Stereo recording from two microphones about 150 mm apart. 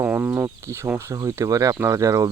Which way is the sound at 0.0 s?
15° right (ahead or behind).